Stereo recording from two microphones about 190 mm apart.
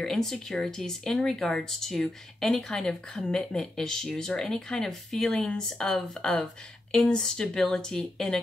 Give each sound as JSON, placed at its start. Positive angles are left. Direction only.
{"t": 0.0, "sound": "speech", "side_deg": 0}